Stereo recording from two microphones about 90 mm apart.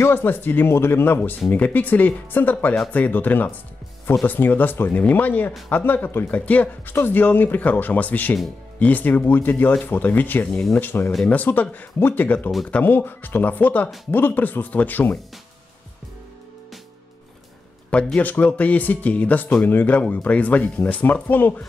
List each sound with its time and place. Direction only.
0.0 s speech: 25° left (ahead or behind)
17.8 s speech: 15° left (ahead or behind)